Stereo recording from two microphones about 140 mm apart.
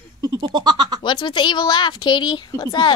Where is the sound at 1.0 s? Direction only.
35° left (ahead or behind).